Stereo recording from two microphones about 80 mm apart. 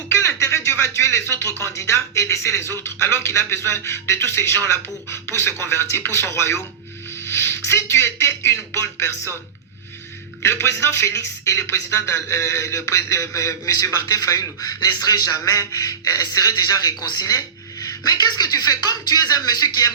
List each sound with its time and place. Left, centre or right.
0.9 s a man's voice: left
10.4 s a man's voice: left